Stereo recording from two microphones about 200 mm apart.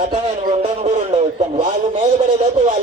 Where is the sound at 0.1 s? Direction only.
35° right (ahead or behind).